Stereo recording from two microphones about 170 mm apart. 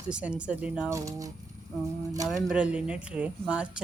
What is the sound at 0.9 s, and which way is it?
Speech, 20° right (ahead or behind).